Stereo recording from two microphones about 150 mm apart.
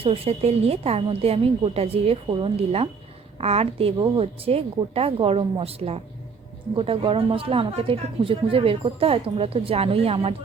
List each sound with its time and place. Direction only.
0.0 s a woman's voice: 40° right (ahead or behind)